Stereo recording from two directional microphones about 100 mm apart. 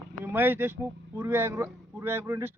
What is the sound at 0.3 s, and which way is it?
Speech, 20° right (ahead or behind).